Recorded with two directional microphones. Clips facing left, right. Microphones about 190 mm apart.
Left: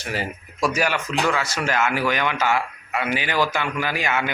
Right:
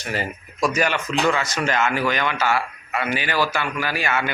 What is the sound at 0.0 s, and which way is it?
Speech, 10° left (ahead or behind).